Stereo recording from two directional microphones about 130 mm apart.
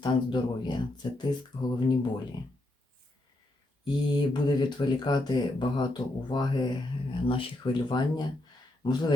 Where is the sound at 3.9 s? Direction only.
35° left (ahead or behind).